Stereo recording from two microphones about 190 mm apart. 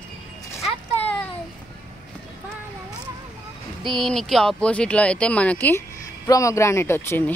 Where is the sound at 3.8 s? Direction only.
Centre (ahead or behind).